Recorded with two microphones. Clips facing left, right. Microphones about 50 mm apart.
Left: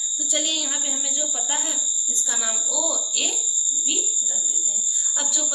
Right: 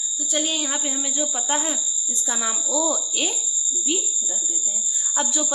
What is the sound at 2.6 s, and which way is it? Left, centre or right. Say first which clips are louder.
Cricket: right 4 dB; right.